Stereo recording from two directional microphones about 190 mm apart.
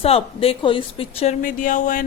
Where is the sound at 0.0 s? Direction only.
30° left (ahead or behind).